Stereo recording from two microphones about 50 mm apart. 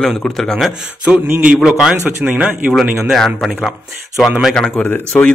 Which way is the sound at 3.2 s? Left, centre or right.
Centre.